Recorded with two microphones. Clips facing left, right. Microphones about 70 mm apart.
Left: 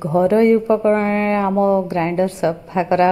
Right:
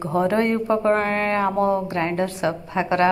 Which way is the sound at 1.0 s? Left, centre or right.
Centre.